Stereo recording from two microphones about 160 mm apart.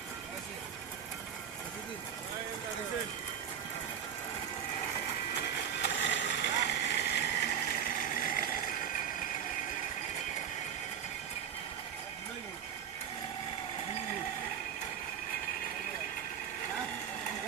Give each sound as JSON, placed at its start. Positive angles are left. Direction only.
{"t": 5.8, "sound": "vehicle", "side_deg": 90}